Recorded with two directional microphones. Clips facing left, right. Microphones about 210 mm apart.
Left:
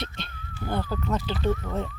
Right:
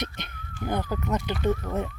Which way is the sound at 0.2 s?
15° right (ahead or behind).